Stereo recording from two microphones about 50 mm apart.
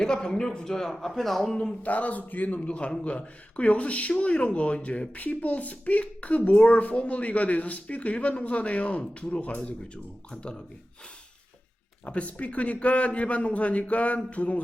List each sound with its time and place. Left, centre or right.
0.0 s a man's voice: centre
1.8 s a man's voice: left
12.0 s a man's voice: left